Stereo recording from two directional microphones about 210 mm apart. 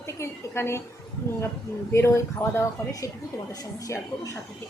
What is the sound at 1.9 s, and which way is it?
A woman's voice, 15° left (ahead or behind).